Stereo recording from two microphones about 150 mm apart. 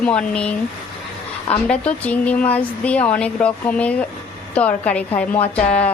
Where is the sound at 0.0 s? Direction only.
5° left (ahead or behind).